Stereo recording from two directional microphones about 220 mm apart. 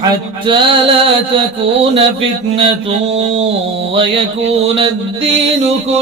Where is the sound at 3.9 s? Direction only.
25° right (ahead or behind).